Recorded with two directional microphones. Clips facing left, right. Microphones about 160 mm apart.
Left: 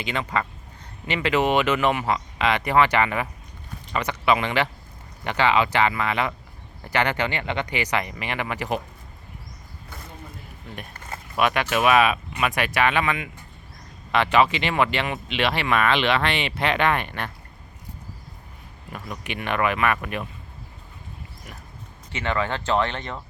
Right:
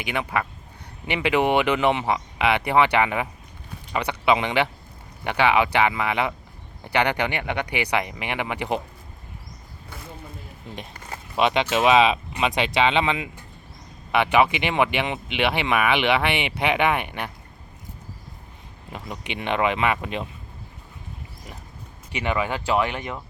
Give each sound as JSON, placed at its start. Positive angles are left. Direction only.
{"t": 0.0, "sound": "speech", "side_deg": -15}
{"t": 11.3, "sound": "speech", "side_deg": -20}
{"t": 18.9, "sound": "speech", "side_deg": -20}
{"t": 22.1, "sound": "speech", "side_deg": -15}